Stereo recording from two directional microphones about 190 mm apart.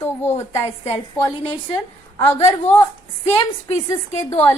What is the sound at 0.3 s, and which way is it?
Speech, 35° left (ahead or behind).